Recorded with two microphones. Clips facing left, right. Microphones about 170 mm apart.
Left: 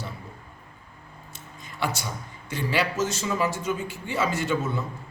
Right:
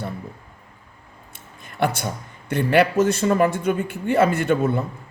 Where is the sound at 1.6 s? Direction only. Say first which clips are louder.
Right 7 dB; 55° right (ahead or behind).